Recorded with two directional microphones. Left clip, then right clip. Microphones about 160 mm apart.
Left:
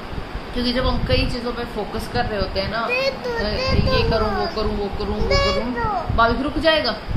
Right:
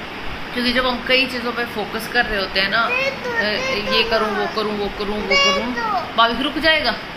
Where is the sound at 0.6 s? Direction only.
10° left (ahead or behind).